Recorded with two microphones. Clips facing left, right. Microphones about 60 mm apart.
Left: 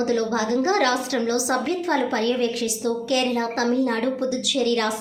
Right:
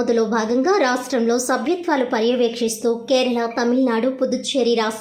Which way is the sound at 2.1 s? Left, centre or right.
Right.